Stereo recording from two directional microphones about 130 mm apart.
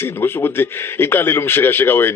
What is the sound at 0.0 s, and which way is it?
Speech, 15° left (ahead or behind).